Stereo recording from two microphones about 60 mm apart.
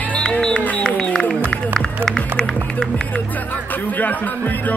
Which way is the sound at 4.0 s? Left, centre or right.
Left.